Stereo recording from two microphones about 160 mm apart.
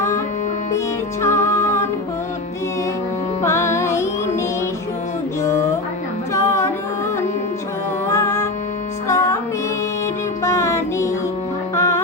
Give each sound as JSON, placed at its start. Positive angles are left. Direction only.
{"t": 1.2, "sound": "music", "side_deg": 15}
{"t": 3.4, "sound": "music", "side_deg": 15}
{"t": 6.3, "sound": "music", "side_deg": 20}
{"t": 8.0, "sound": "music", "side_deg": 15}
{"t": 10.4, "sound": "music", "side_deg": 20}